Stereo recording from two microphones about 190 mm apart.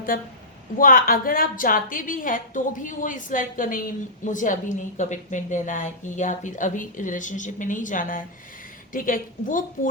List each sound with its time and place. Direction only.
0.8 s a woman's voice: 50° left (ahead or behind)